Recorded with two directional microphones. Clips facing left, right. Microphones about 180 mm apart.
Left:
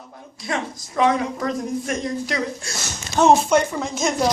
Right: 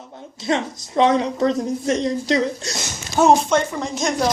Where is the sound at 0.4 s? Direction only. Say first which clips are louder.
Right 5 dB; 25° right (ahead or behind).